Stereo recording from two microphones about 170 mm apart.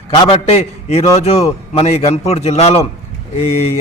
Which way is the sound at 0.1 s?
35° left (ahead or behind).